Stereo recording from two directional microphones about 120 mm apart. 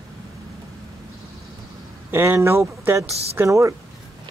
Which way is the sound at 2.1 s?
20° right (ahead or behind).